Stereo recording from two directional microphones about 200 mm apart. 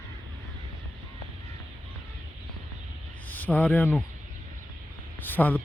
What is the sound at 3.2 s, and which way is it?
Speech, 10° left (ahead or behind).